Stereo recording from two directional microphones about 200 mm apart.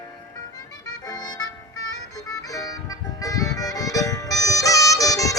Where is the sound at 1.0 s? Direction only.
20° left (ahead or behind).